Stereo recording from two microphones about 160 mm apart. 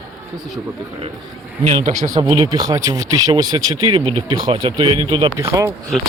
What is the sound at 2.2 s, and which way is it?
Speech, 25° right (ahead or behind).